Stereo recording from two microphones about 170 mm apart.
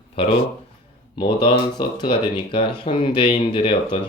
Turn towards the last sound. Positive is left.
turn(degrees=30)  # may be behind; listen again after turning